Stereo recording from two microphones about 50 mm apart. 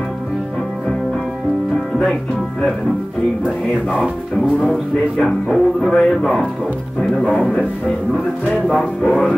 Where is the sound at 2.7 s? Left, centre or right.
Centre.